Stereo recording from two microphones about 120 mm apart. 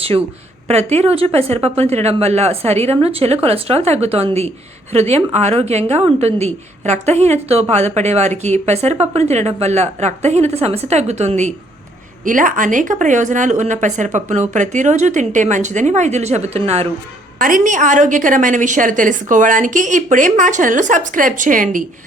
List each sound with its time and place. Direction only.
0.7 s speech: 60° right (ahead or behind)
12.2 s a woman's voice: 90° right; by 16.9 s 60° right (ahead or behind)
17.6 s a woman's voice: 90° right